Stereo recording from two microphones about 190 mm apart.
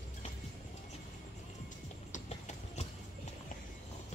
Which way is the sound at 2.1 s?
40° left (ahead or behind).